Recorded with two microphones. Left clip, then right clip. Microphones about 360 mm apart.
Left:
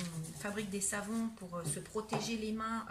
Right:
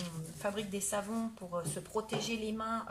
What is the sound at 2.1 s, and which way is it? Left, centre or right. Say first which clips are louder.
Speech: right 1 dB; centre.